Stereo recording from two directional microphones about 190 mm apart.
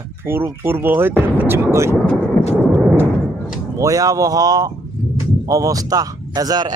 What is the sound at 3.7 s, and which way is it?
A man's voice, 15° right (ahead or behind).